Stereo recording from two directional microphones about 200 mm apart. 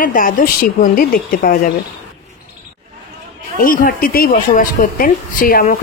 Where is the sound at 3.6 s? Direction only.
45° left (ahead or behind).